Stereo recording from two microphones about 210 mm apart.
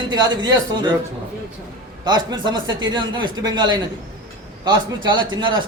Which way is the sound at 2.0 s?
20° right (ahead or behind).